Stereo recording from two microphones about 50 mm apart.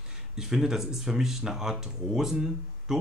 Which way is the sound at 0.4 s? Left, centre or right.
Centre.